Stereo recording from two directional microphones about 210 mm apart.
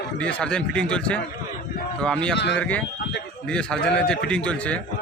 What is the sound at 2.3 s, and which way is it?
Speech, 55° left (ahead or behind).